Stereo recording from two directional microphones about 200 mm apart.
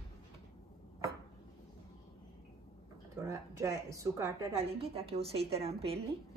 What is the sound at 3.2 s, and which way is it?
A woman's voice, 15° right (ahead or behind).